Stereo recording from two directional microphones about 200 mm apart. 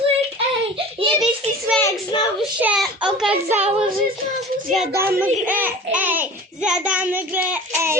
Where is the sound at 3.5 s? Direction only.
30° right (ahead or behind).